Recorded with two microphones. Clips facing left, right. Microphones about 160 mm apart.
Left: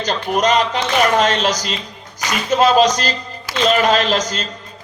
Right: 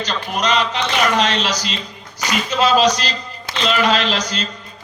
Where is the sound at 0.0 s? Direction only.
50° left (ahead or behind).